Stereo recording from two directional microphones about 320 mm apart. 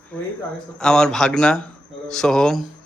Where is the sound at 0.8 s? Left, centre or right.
Centre.